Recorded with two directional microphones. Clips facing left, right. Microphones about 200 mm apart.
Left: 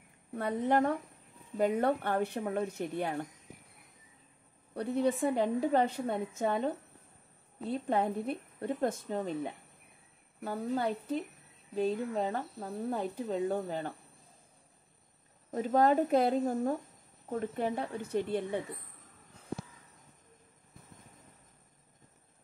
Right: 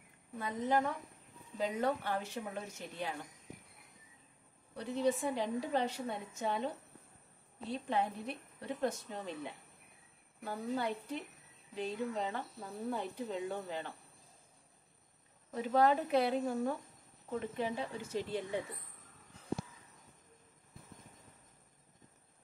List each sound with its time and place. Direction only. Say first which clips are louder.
0.4 s speech: left 5 dB; 65° left (ahead or behind)
4.7 s a woman's voice: left 4 dB; 60° left (ahead or behind)
7.7 s a woman's voice: left 5 dB; 50° left (ahead or behind)
15.5 s a woman's voice: left 3 dB; 45° left (ahead or behind); by 18.6 s 60° left (ahead or behind)